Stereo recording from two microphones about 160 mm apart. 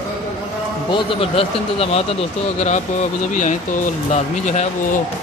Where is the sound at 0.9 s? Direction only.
35° left (ahead or behind).